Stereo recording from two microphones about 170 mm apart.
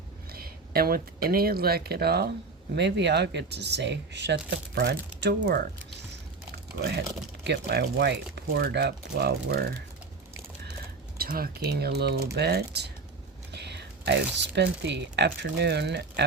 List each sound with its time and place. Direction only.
0.3 s speech: 60° right (ahead or behind)
2.7 s speech: 90° right
6.7 s speech: 70° right (ahead or behind)
11.2 s speech: 60° right (ahead or behind); by 16.2 s 85° right